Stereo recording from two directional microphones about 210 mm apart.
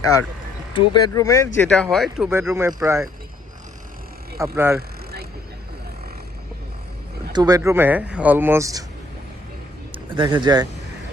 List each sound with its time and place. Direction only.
0.0 s speech: 15° left (ahead or behind); by 3.1 s 15° right (ahead or behind)
4.4 s speech: 15° right (ahead or behind)
7.3 s speech: 15° right (ahead or behind)
9.9 s speech: 20° right (ahead or behind)